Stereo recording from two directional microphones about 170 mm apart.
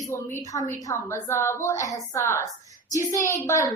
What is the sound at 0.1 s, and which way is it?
A woman's voice, 15° left (ahead or behind).